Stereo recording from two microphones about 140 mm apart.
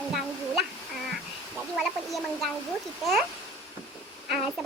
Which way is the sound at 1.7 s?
Centre (ahead or behind).